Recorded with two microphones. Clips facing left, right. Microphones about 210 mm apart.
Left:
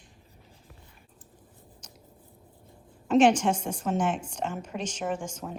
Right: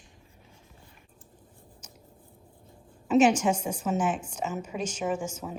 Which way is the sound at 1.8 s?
10° right (ahead or behind).